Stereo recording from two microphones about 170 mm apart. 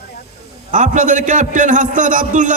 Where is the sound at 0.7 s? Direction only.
45° right (ahead or behind).